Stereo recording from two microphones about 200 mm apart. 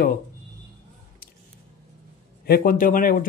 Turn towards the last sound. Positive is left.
turn(degrees=45)  # may be behind; listen again after turning